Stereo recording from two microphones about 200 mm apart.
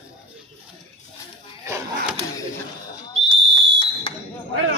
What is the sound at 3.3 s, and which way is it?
Fire alarm, 25° left (ahead or behind).